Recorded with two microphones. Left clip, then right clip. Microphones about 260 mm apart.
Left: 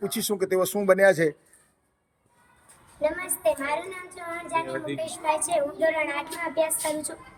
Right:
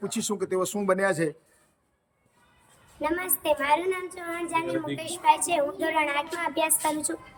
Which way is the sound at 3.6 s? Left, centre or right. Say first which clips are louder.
Right 5 dB; centre.